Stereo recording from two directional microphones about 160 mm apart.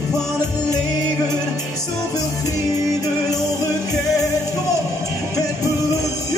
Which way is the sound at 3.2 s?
20° left (ahead or behind).